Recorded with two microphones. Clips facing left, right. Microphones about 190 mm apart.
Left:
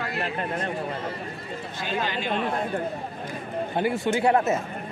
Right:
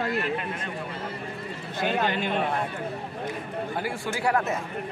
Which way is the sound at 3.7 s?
20° left (ahead or behind).